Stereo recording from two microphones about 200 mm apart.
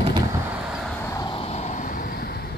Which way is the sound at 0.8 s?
10° left (ahead or behind).